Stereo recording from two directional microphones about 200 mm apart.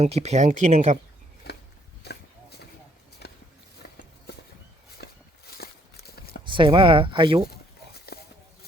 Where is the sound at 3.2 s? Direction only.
55° left (ahead or behind).